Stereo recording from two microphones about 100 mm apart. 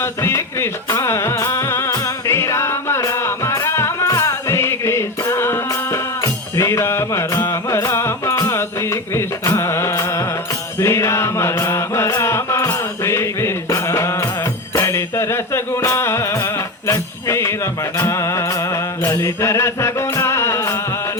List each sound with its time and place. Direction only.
0.0 s music: 25° left (ahead or behind)
10.8 s mantra: 30° left (ahead or behind)
14.8 s music: 30° left (ahead or behind)
17.9 s mantra: 30° left (ahead or behind)